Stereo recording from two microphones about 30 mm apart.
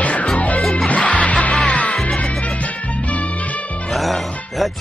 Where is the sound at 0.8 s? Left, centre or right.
Left.